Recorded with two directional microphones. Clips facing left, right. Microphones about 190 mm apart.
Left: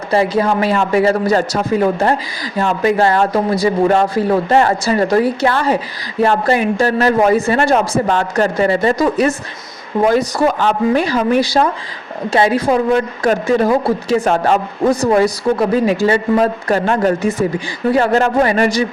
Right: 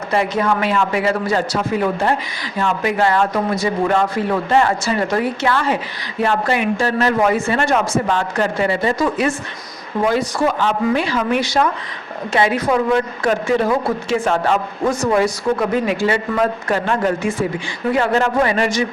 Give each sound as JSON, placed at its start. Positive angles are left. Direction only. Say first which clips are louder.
{"t": 0.1, "sound": "a woman's voice", "louder": "left 4 dB", "side_deg": 35}